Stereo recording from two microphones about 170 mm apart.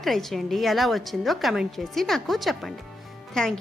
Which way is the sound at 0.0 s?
Centre (ahead or behind).